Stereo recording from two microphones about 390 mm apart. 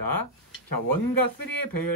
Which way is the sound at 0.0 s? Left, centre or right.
Left.